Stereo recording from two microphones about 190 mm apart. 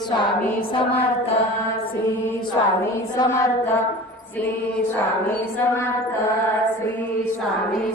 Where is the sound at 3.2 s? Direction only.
20° left (ahead or behind).